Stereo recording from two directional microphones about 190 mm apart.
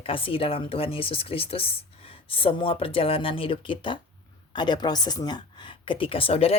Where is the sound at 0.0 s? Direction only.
30° left (ahead or behind).